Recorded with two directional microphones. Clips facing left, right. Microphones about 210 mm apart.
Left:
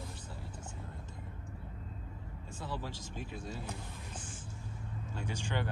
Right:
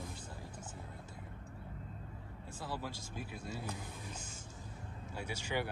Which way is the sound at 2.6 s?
10° right (ahead or behind).